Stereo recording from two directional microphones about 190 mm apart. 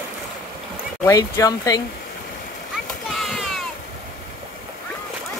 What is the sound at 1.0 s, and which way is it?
Speech, 15° left (ahead or behind).